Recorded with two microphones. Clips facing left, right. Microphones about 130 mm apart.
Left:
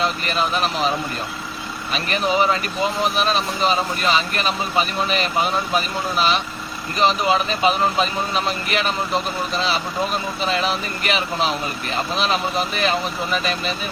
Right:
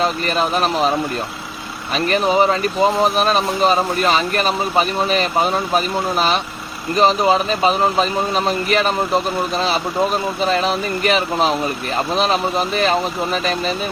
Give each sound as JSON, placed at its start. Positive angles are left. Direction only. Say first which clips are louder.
{"t": 0.0, "sound": "speech", "louder": "right 3 dB", "side_deg": -45}
{"t": 1.9, "sound": "speech", "louder": "right 5 dB", "side_deg": -40}
{"t": 10.4, "sound": "speech", "louder": "right 4 dB", "side_deg": -40}